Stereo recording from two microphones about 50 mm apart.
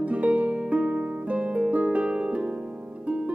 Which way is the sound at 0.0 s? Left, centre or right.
Right.